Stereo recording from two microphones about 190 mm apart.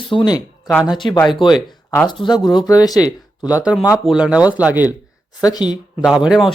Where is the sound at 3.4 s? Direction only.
5° right (ahead or behind).